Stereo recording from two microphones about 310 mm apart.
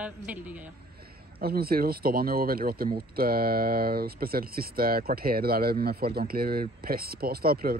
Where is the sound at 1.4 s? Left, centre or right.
Right.